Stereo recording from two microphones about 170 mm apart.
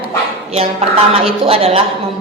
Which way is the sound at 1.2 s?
35° right (ahead or behind).